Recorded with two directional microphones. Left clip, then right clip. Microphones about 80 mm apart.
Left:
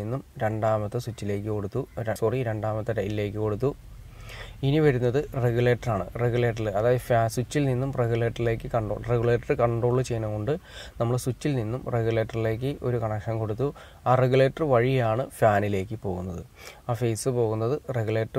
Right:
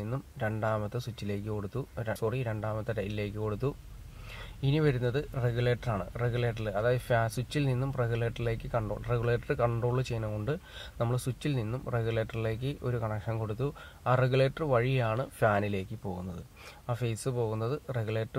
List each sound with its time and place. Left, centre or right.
0.4 s speech: left
12.8 s speech: centre
13.5 s speech: centre
17.3 s speech: centre
17.8 s speech: left